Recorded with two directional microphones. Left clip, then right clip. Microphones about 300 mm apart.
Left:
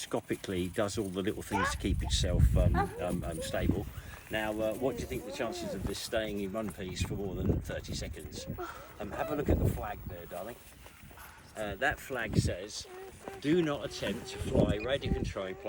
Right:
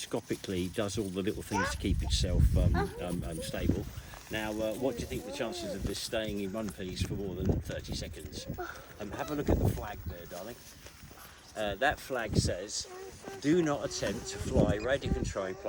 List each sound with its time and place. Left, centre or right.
0.0 s speech: centre
11.5 s speech: right